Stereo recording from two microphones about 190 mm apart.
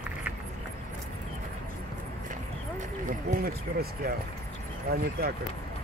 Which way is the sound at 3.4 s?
50° right (ahead or behind).